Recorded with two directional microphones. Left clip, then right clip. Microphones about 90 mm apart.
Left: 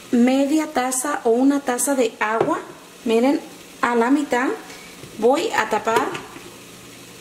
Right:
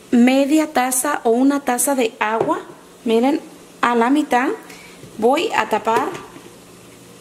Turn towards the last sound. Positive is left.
turn(degrees=-35)  # may be behind; listen again after turning